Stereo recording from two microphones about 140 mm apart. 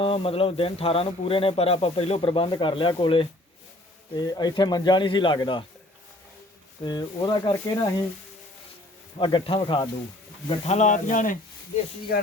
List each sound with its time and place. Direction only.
0.0 s speech: 40° left (ahead or behind)
6.8 s speech: 30° left (ahead or behind)
9.1 s speech: 35° left (ahead or behind)
10.5 s speech: 55° left (ahead or behind)